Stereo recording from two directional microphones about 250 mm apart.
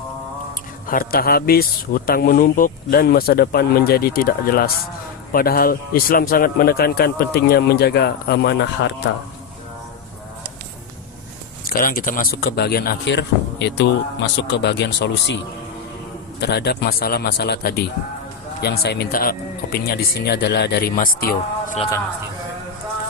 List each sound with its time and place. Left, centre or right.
0.9 s speech: left
11.6 s speech: left
16.4 s speech: left